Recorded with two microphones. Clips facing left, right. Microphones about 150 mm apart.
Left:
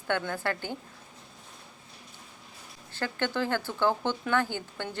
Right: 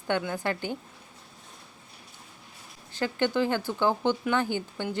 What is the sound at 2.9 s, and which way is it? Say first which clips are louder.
Speech: right 4 dB; 15° right (ahead or behind).